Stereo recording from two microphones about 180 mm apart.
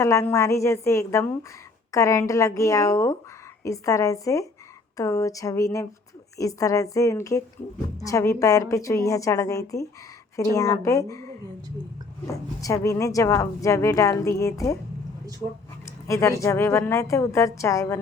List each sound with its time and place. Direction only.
0.0 s speech: 15° left (ahead or behind)
12.3 s speech: 20° left (ahead or behind)
15.4 s speech: 20° right (ahead or behind)
15.9 s speech: 15° left (ahead or behind)